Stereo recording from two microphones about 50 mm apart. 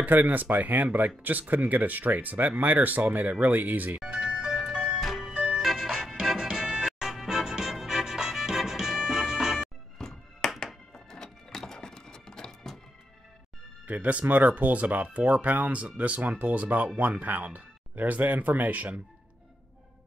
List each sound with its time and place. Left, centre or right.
0.0 s speech: right
4.0 s ice cream truck: centre
5.0 s music: centre
5.3 s music: right
5.6 s music: centre
9.9 s music: centre
13.8 s speech: right